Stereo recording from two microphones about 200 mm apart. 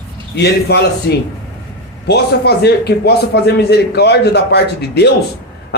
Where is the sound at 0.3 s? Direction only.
55° left (ahead or behind).